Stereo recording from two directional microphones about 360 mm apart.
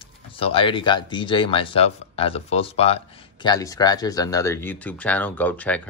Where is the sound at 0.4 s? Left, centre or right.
Centre.